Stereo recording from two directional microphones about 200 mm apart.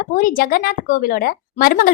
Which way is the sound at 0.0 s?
40° left (ahead or behind).